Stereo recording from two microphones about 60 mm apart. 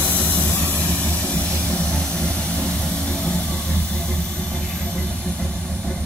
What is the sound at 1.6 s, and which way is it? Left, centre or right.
Vehicle, left.